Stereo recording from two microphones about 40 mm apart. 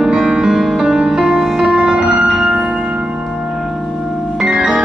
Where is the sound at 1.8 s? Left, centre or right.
Centre.